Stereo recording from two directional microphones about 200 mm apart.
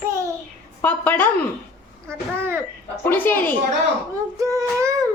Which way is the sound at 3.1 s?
10° left (ahead or behind).